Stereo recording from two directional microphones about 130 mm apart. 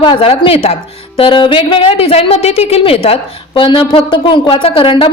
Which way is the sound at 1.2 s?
40° left (ahead or behind).